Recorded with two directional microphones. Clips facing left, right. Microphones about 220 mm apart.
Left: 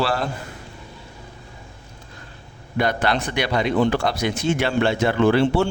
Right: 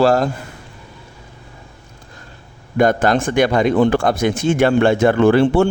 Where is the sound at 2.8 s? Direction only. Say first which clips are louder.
Right 7 dB; 45° right (ahead or behind).